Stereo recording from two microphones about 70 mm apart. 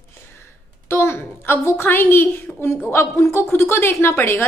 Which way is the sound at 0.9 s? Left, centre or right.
Left.